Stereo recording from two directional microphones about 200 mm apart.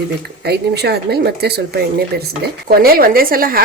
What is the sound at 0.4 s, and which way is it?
Speech, 55° right (ahead or behind).